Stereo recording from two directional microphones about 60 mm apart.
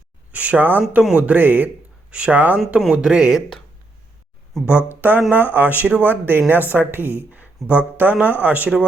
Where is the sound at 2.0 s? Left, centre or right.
Centre.